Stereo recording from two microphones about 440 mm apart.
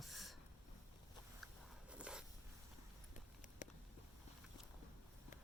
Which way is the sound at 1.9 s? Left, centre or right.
Centre.